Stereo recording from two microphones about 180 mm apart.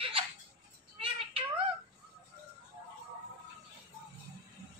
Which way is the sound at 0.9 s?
30° right (ahead or behind).